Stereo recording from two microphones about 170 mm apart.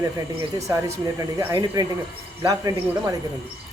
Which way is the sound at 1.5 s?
25° right (ahead or behind).